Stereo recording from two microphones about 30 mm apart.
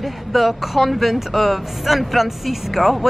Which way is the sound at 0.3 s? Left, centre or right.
Centre.